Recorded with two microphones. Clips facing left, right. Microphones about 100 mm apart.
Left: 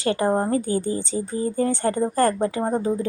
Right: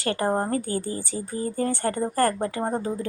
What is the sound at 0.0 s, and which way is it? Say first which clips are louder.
A woman's voice: left 3 dB; 20° left (ahead or behind).